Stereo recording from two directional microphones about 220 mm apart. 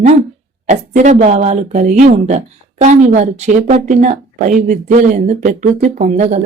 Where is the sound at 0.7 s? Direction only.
35° right (ahead or behind).